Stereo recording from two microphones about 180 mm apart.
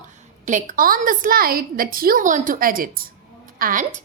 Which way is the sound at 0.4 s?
45° right (ahead or behind).